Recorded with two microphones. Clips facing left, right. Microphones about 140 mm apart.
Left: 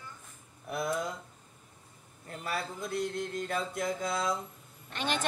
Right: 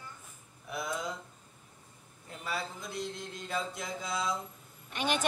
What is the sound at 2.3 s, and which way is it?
Mantra, 55° left (ahead or behind).